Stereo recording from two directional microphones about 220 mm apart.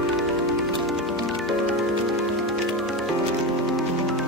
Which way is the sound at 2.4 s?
Centre (ahead or behind).